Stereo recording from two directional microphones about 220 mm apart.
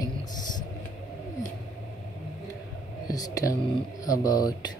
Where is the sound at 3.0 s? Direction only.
15° left (ahead or behind).